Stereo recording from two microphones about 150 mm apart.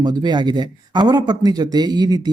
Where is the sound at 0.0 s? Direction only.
30° right (ahead or behind).